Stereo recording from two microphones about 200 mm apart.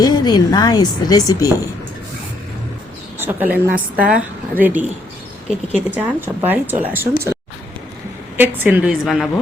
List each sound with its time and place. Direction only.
0.0 s speech: 20° left (ahead or behind)
3.2 s a woman's voice: 10° right (ahead or behind)
5.9 s a woman's voice: 10° right (ahead or behind)
8.4 s a woman's voice: 10° right (ahead or behind)